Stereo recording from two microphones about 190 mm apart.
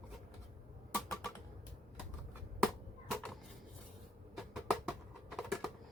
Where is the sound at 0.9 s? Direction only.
15° left (ahead or behind).